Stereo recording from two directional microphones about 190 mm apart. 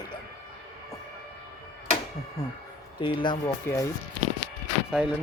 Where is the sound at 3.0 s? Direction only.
25° left (ahead or behind).